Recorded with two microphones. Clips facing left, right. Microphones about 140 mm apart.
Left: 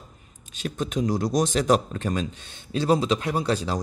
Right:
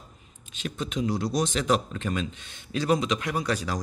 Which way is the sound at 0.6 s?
40° left (ahead or behind).